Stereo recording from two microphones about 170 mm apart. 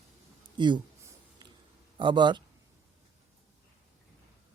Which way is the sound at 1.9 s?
30° right (ahead or behind).